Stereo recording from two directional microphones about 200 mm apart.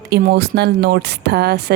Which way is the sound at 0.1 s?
55° right (ahead or behind).